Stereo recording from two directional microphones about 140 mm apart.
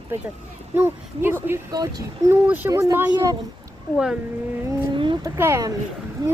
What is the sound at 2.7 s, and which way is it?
Speech, 25° right (ahead or behind).